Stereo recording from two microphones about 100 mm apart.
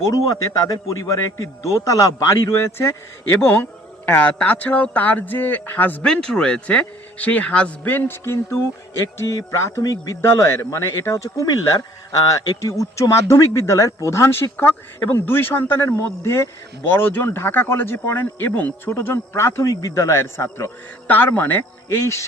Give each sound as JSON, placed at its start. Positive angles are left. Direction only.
{"t": 0.1, "sound": "a man's voice", "side_deg": 35}
{"t": 22.0, "sound": "a man's voice", "side_deg": 30}